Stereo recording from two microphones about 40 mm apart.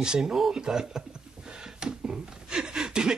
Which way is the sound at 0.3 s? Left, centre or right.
Centre.